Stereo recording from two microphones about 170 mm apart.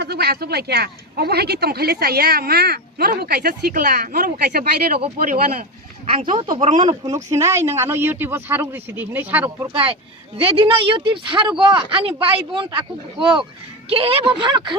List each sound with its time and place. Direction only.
0.0 s speech: 70° right (ahead or behind); by 5.6 s 55° right (ahead or behind)
6.1 s a woman's voice: 30° right (ahead or behind); by 9.6 s 10° right (ahead or behind)
9.7 s a woman's voice: 35° right (ahead or behind)
13.9 s speech: 35° right (ahead or behind)